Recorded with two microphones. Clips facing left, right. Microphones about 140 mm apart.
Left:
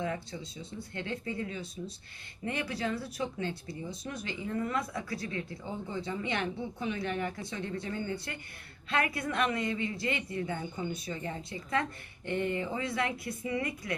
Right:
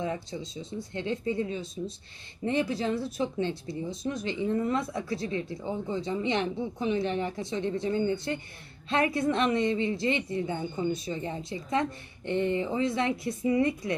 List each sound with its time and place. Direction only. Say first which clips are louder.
0.0 s speech: right 3 dB; 20° right (ahead or behind)